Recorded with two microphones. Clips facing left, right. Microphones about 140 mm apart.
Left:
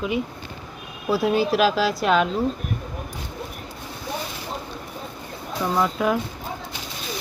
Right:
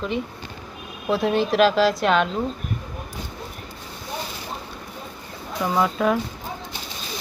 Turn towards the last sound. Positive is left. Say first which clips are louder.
# right 1 dB
turn(degrees=0)  # may be behind; listen again after turning